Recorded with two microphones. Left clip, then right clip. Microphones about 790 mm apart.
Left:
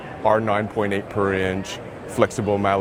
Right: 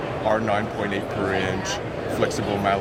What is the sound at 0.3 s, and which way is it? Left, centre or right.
Speech, left.